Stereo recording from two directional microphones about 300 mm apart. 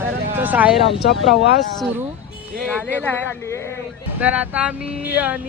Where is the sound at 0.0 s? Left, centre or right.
Centre.